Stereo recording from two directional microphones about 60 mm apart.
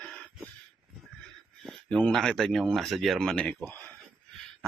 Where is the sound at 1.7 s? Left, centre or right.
Centre.